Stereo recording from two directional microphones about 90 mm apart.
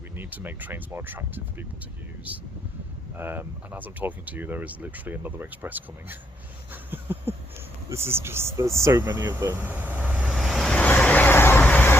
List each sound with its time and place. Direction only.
0.2 s speech: 20° right (ahead or behind)
6.9 s a sound: 20° right (ahead or behind)
7.9 s speech: 30° right (ahead or behind)
10.3 s vehicle: centre (ahead or behind)
10.7 s vehicle: 15° left (ahead or behind)